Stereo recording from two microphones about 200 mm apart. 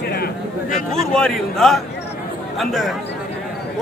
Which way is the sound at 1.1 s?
5° left (ahead or behind).